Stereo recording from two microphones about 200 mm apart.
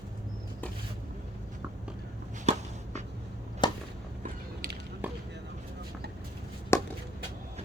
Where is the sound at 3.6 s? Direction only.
25° left (ahead or behind).